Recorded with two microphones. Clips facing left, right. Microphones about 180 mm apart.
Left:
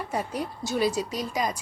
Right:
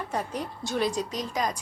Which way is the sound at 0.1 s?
10° left (ahead or behind).